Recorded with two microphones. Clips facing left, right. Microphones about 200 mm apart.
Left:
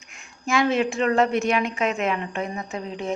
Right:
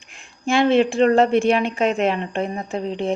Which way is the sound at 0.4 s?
30° right (ahead or behind).